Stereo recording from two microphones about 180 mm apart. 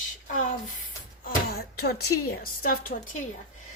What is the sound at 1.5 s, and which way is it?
A woman's voice, 60° left (ahead or behind).